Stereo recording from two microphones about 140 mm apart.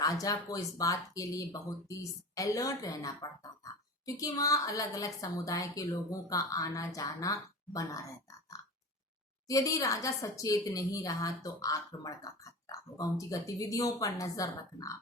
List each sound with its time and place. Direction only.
0.0 s speech: 25° left (ahead or behind)